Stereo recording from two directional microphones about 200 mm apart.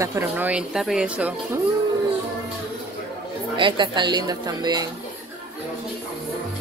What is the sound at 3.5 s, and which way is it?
A woman's voice, 25° right (ahead or behind).